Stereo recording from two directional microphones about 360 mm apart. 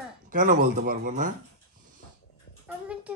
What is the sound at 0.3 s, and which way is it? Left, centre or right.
Speech, right.